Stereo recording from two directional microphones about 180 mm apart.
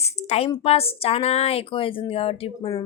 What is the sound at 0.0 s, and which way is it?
Speech, 35° left (ahead or behind).